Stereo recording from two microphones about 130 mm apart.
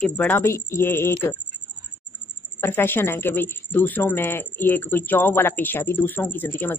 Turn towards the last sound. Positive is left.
turn(degrees=15)  # may be behind; listen again after turning